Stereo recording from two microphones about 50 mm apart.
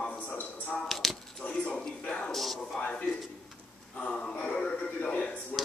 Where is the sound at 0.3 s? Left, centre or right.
Left.